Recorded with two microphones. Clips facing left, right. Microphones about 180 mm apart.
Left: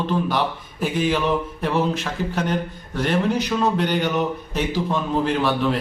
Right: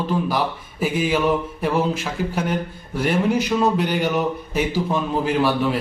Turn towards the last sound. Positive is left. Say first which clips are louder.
# right 1 dB
turn(degrees=-5)  # may be behind; listen again after turning